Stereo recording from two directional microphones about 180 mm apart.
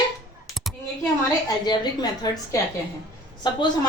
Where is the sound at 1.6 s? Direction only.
25° left (ahead or behind).